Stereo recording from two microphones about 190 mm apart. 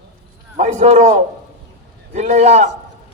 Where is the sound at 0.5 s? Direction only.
35° right (ahead or behind).